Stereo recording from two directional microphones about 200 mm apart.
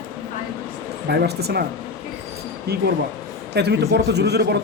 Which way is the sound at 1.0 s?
55° right (ahead or behind).